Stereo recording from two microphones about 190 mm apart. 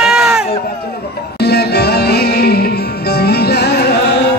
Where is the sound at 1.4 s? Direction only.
60° left (ahead or behind).